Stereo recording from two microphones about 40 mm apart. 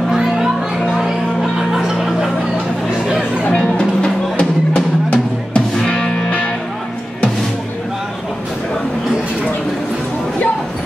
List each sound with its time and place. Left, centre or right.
0.1 s music: centre
1.7 s chuckle: centre
3.5 s music: left